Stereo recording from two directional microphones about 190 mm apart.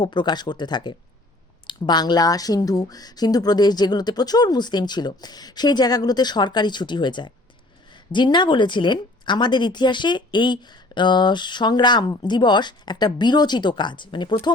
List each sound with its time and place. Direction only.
0.0 s a woman's voice: 25° left (ahead or behind)